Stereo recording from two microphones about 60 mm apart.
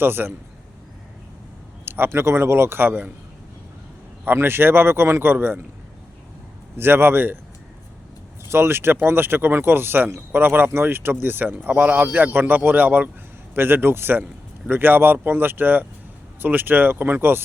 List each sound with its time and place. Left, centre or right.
0.0 s speech: right
1.8 s a man's voice: right
4.3 s speech: right
6.7 s speech: right
8.4 s speech: right